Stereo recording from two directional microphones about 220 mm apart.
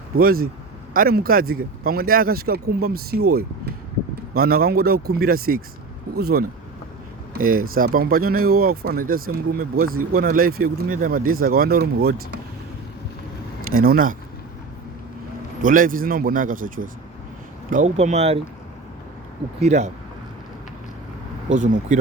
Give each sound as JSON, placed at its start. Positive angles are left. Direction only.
{"t": 0.2, "sound": "speech", "side_deg": -40}
{"t": 4.4, "sound": "speech", "side_deg": -45}
{"t": 13.7, "sound": "speech", "side_deg": -40}
{"t": 15.6, "sound": "speech", "side_deg": -40}
{"t": 19.5, "sound": "speech", "side_deg": -30}
{"t": 21.5, "sound": "speech", "side_deg": -35}